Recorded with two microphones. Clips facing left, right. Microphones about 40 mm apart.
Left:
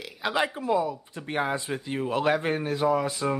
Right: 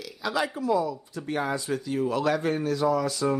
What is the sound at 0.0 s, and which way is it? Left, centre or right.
Speech, left.